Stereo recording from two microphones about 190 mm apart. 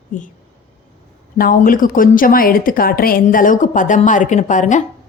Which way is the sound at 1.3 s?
50° left (ahead or behind).